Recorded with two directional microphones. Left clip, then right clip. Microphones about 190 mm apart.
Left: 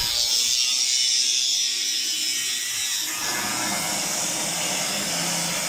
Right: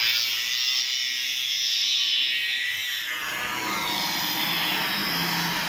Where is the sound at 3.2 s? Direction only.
55° left (ahead or behind).